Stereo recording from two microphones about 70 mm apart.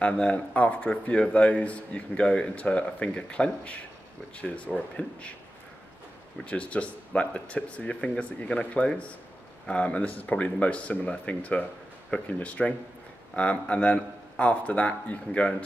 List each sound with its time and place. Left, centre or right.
0.0 s speech: centre
6.4 s speech: centre